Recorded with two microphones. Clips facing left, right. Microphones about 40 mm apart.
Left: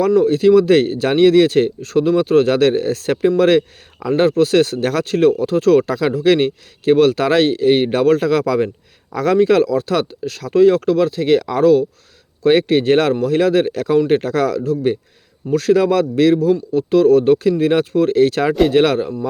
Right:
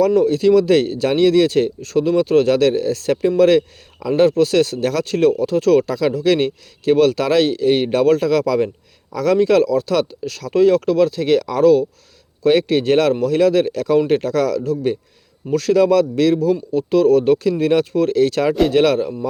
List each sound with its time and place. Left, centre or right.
0.2 s speech: left
2.6 s speech: left
4.2 s speech: centre
5.0 s speech: centre
10.5 s speech: centre
15.9 s speech: left